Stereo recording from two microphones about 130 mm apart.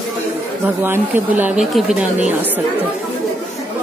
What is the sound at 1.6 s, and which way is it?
Speech, 5° right (ahead or behind).